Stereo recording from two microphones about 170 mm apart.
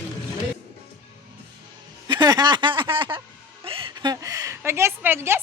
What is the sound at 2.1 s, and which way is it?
Speech, 25° right (ahead or behind).